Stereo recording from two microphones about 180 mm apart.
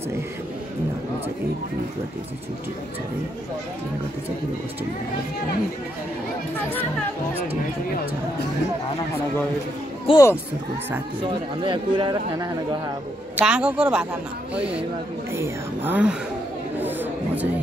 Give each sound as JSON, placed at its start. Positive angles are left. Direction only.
{"t": 10.0, "sound": "speech", "side_deg": 20}
{"t": 11.2, "sound": "speech", "side_deg": -25}
{"t": 13.4, "sound": "a man's voice", "side_deg": -5}
{"t": 15.3, "sound": "speech", "side_deg": -15}
{"t": 16.8, "sound": "chatter", "side_deg": -10}